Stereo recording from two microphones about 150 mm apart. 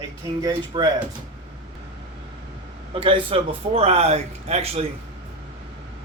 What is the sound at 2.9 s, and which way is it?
A man's voice, 35° right (ahead or behind).